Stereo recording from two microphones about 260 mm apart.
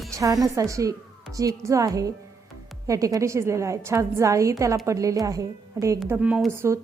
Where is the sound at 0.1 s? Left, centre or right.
Centre.